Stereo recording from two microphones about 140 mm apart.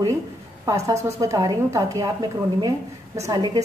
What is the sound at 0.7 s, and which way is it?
A woman's voice, 25° right (ahead or behind).